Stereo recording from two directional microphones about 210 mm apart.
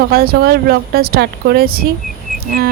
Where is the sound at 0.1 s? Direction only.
45° right (ahead or behind).